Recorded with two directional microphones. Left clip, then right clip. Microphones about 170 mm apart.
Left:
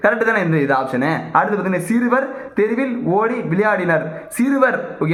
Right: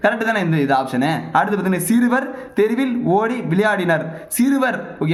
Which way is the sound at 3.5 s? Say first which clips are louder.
Even; 55° right (ahead or behind).